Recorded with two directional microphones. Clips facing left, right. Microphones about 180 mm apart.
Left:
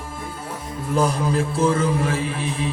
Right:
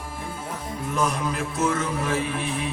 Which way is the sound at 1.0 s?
30° left (ahead or behind).